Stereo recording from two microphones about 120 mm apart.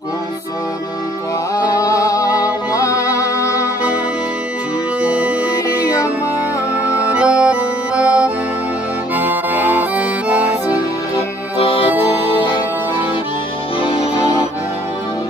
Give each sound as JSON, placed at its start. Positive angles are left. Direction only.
{"t": 1.5, "sound": "a sound", "side_deg": 30}
{"t": 2.7, "sound": "music", "side_deg": 25}
{"t": 5.0, "sound": "music", "side_deg": -10}
{"t": 5.8, "sound": "music", "side_deg": 30}
{"t": 7.0, "sound": "music", "side_deg": -10}
{"t": 9.1, "sound": "accordion", "side_deg": -15}
{"t": 11.5, "sound": "music", "side_deg": 50}
{"t": 13.7, "sound": "music", "side_deg": 50}